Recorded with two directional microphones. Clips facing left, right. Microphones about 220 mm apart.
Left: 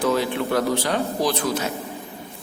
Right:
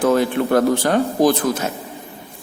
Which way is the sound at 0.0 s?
50° right (ahead or behind).